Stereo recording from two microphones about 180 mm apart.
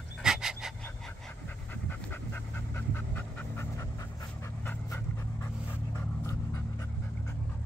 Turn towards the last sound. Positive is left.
turn(degrees=15)  # may be behind; listen again after turning